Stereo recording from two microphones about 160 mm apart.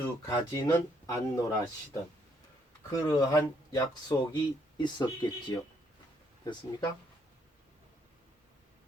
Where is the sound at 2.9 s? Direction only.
25° left (ahead or behind).